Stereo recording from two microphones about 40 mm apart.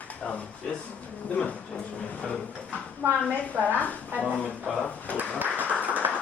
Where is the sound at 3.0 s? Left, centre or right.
Right.